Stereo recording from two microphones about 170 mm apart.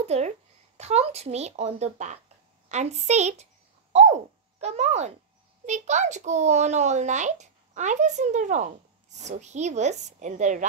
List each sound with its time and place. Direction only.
0.0 s a child's voice: 40° right (ahead or behind)